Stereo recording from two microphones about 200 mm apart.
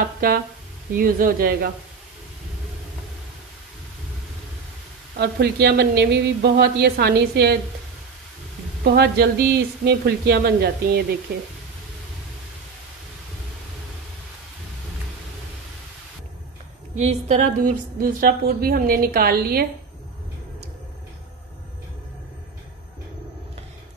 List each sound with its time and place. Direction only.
0.2 s a woman's voice: 45° right (ahead or behind)
5.2 s a woman's voice: 55° right (ahead or behind)
8.9 s a woman's voice: 55° right (ahead or behind)
16.9 s a woman's voice: 35° right (ahead or behind)